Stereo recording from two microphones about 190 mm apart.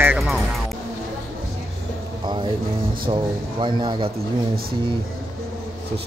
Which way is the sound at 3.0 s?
25° right (ahead or behind).